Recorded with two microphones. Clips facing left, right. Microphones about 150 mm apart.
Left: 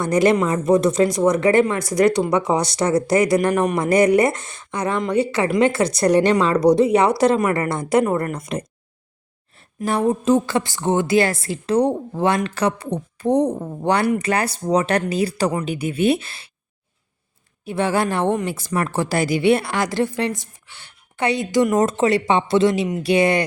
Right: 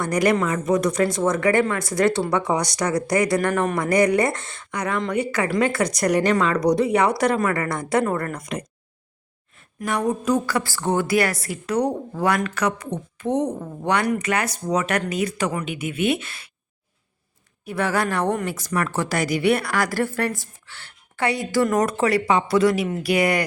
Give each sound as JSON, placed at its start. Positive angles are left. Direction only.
{"t": 0.0, "sound": "a woman's voice", "side_deg": 25}
{"t": 17.7, "sound": "speech", "side_deg": 25}